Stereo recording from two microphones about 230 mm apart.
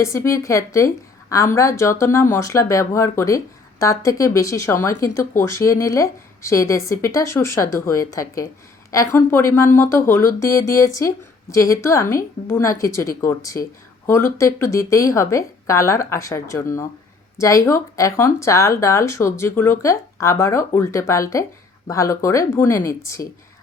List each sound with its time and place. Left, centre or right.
0.0 s speech: centre